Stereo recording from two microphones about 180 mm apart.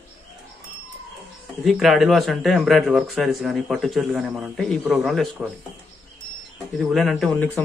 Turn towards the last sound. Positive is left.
turn(degrees=5)  # may be behind; listen again after turning